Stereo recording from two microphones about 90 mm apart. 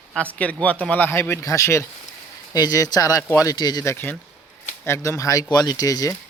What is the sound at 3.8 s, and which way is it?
Speech, 30° left (ahead or behind).